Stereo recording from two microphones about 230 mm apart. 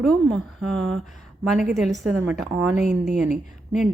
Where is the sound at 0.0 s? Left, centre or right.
Centre.